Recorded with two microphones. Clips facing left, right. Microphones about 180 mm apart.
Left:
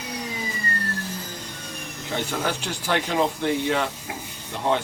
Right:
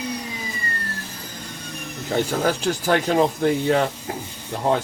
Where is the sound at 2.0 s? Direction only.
40° right (ahead or behind).